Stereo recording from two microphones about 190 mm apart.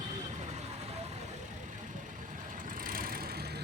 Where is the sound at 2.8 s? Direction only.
50° right (ahead or behind).